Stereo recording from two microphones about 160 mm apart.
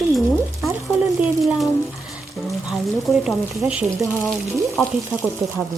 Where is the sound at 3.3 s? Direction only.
5° right (ahead or behind).